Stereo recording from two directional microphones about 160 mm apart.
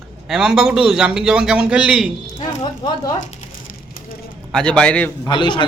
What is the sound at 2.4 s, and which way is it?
Speech, 25° left (ahead or behind).